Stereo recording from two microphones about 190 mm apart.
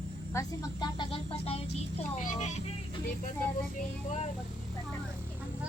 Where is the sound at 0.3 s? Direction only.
20° left (ahead or behind).